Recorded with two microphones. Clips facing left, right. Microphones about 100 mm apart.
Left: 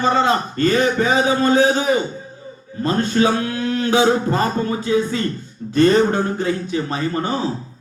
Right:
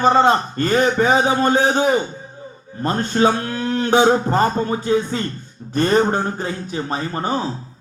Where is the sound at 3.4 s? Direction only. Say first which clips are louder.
Left 1 dB; 40° right (ahead or behind).